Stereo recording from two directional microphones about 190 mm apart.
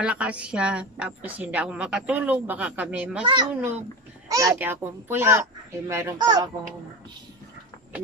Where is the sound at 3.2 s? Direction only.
25° right (ahead or behind).